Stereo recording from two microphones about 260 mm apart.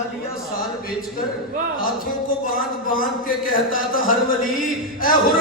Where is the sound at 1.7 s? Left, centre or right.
Left.